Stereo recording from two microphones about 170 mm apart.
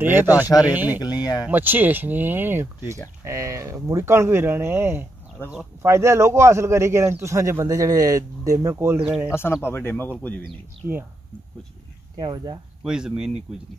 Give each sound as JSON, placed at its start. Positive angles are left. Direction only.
{"t": 0.0, "sound": "a man's voice", "side_deg": -10}
{"t": 0.9, "sound": "speech", "side_deg": 25}
{"t": 1.5, "sound": "a man's voice", "side_deg": -10}
{"t": 9.3, "sound": "speech", "side_deg": 15}
{"t": 12.2, "sound": "speech", "side_deg": -25}
{"t": 12.8, "sound": "speech", "side_deg": -5}